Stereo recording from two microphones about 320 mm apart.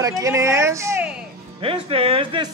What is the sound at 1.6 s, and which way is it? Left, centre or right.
Speech, centre.